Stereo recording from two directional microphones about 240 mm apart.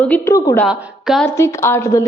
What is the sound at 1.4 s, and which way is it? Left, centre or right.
Speech, centre.